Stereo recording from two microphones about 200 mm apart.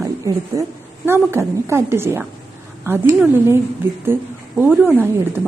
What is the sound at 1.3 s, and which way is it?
A woman's voice, 15° right (ahead or behind).